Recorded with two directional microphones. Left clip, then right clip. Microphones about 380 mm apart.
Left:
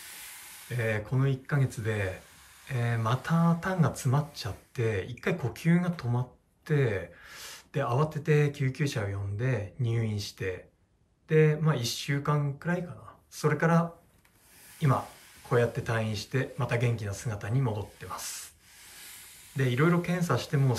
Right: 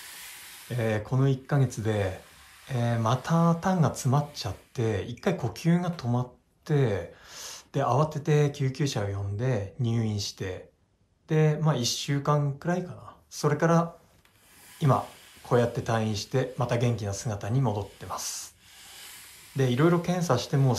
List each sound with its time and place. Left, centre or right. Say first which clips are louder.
0.7 s speech: right 2 dB; centre
19.5 s speech: right 3 dB; centre